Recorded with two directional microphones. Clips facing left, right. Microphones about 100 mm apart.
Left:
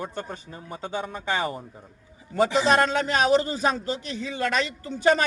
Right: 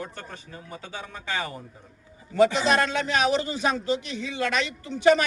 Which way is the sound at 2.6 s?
35° left (ahead or behind).